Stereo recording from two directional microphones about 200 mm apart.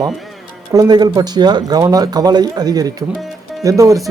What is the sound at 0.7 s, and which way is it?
Speech, 20° right (ahead or behind).